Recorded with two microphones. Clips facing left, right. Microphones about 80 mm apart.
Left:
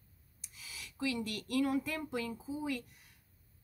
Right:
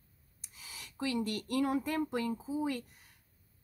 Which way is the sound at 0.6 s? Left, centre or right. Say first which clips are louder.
Even; right.